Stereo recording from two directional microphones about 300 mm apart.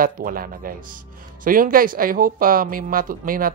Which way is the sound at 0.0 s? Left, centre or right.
Right.